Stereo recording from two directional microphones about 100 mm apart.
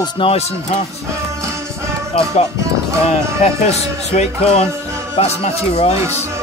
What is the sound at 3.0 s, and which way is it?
Speech, 90° left.